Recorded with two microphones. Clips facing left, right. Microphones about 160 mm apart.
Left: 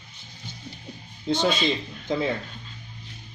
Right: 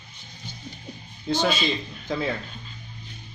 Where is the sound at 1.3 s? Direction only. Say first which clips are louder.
Left 1 dB; 20° left (ahead or behind).